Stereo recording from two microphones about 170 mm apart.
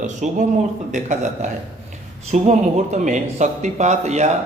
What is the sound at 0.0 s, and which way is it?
Speech, 45° right (ahead or behind).